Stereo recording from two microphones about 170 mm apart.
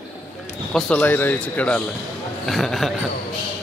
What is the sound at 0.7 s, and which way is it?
Speech, 5° left (ahead or behind).